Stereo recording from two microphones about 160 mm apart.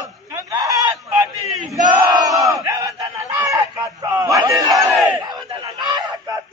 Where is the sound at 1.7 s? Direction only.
25° right (ahead or behind).